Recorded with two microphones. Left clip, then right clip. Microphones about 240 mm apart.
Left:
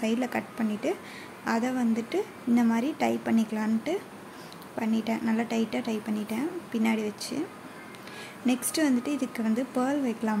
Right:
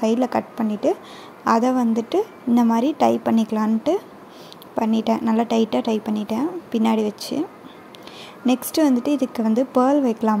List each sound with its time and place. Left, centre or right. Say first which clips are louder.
0.0 s speech: right 9 dB; right
8.5 s speech: right 8 dB; right